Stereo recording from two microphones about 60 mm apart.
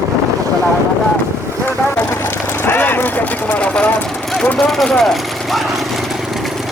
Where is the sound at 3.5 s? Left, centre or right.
Centre.